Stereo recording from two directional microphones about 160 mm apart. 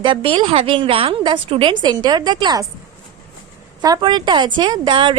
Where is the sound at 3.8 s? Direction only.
25° right (ahead or behind).